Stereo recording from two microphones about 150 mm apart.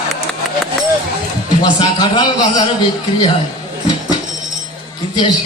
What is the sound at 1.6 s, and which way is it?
A man's voice, 30° left (ahead or behind).